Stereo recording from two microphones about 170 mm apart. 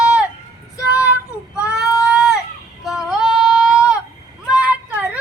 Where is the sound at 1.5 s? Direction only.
5° right (ahead or behind).